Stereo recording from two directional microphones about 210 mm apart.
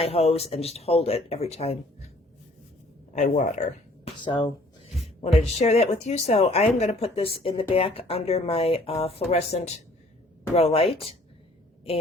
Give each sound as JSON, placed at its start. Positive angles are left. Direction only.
{"t": 0.0, "sound": "speech", "side_deg": 30}
{"t": 3.1, "sound": "speech", "side_deg": 35}
{"t": 4.2, "sound": "speech", "side_deg": 20}